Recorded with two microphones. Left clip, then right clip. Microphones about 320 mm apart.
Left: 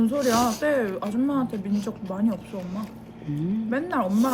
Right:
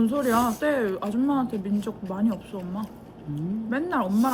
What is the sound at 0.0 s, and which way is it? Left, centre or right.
Speech, centre.